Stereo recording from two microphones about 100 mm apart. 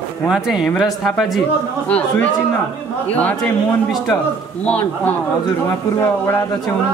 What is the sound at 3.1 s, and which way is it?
Speech, 15° left (ahead or behind).